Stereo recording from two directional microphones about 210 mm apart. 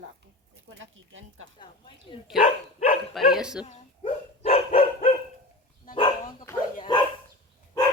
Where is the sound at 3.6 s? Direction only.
30° left (ahead or behind).